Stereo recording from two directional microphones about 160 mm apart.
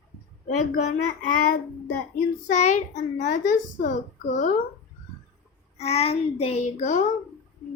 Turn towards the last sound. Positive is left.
turn(degrees=45)  # may be behind; listen again after turning